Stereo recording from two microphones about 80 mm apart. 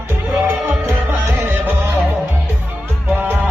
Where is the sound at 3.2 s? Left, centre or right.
Right.